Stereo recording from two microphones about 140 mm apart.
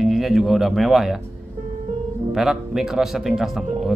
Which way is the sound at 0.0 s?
Centre (ahead or behind).